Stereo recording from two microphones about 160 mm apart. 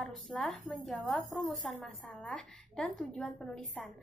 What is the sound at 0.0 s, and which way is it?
A woman's voice, centre (ahead or behind).